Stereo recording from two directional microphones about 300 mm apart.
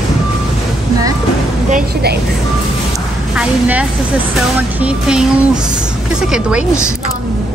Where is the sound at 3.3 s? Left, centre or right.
Centre.